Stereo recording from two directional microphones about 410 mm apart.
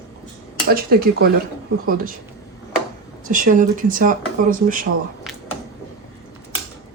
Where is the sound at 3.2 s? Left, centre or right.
Centre.